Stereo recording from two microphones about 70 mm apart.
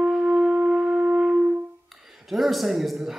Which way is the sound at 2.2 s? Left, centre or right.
Centre.